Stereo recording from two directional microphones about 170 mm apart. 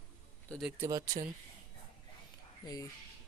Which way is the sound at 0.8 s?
20° right (ahead or behind).